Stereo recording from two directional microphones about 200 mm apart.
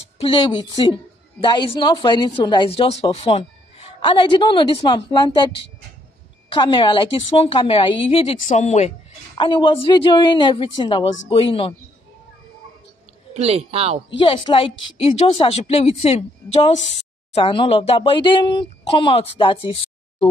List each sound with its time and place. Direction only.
0.2 s a woman's voice: 25° left (ahead or behind)
6.5 s a woman's voice: 25° left (ahead or behind)
13.3 s speech: 30° right (ahead or behind)
14.1 s a woman's voice: 25° left (ahead or behind)